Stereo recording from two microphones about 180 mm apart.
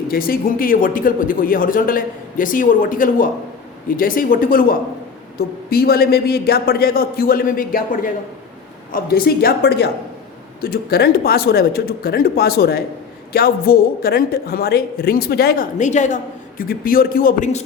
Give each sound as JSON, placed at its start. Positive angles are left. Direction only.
{"t": 0.1, "sound": "a man's voice", "side_deg": 55}